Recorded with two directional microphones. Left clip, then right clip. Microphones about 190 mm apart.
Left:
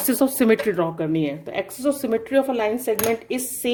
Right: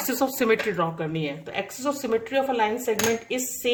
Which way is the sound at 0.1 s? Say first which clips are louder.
Left 4 dB; 55° left (ahead or behind).